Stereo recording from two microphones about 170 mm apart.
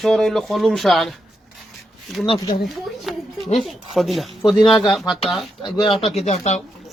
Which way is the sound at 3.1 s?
Centre (ahead or behind).